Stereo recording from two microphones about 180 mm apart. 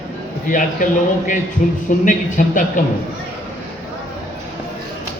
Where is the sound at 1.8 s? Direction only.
45° left (ahead or behind).